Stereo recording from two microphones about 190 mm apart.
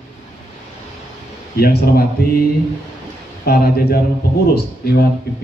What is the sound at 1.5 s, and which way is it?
Speech, 55° left (ahead or behind).